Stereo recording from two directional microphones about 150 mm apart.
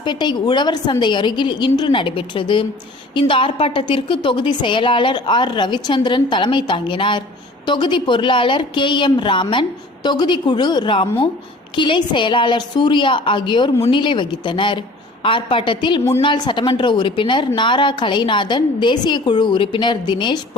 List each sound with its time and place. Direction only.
0.0 s a woman's voice: 30° left (ahead or behind)